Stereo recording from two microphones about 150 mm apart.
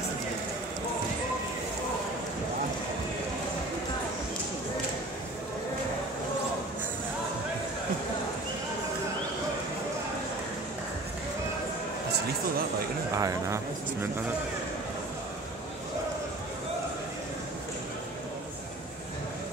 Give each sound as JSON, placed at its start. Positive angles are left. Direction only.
{"t": 13.1, "sound": "speech", "side_deg": -20}